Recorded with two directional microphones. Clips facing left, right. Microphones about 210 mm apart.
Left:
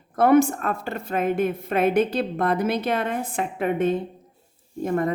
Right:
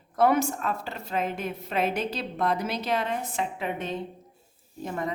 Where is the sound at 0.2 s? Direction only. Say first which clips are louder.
Left 6 dB; 55° left (ahead or behind).